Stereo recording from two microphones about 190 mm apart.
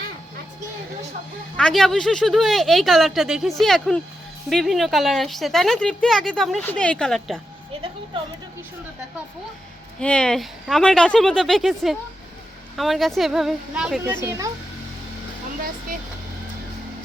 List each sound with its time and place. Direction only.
1.5 s a woman's voice: 5° left (ahead or behind)
10.0 s a woman's voice: 5° left (ahead or behind)
14.3 s speech: 15° right (ahead or behind)